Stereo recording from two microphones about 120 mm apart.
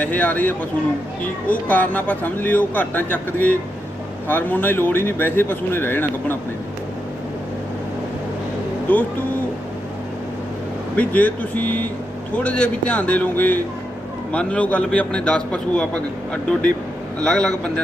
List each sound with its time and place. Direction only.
0.0 s a man's voice: 15° left (ahead or behind)
8.9 s a man's voice: 15° left (ahead or behind)
10.9 s a man's voice: 10° left (ahead or behind)